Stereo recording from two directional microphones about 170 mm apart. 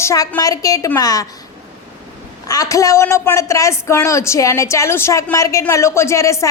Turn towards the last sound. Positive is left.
turn(degrees=20)  # may be behind; listen again after turning